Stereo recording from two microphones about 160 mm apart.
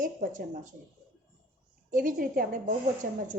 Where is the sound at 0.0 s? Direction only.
55° right (ahead or behind).